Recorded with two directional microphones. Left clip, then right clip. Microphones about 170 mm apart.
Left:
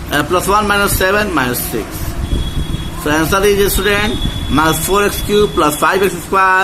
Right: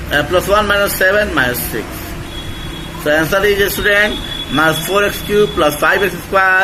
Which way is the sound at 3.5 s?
65° left (ahead or behind).